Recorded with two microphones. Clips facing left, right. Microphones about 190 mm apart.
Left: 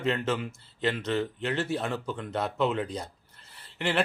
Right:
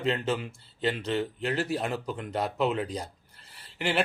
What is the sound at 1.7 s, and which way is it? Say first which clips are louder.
Speech: even; 10° right (ahead or behind).